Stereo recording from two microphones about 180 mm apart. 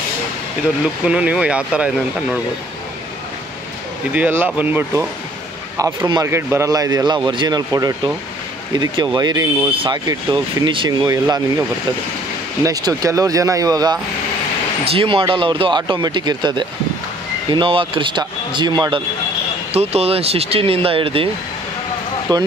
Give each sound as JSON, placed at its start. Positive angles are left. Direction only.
{"t": 1.0, "sound": "speech", "side_deg": -5}
{"t": 4.1, "sound": "speech", "side_deg": -10}
{"t": 5.8, "sound": "speech", "side_deg": -20}
{"t": 12.6, "sound": "speech", "side_deg": -20}
{"t": 14.9, "sound": "speech", "side_deg": -30}
{"t": 22.3, "sound": "speech", "side_deg": -25}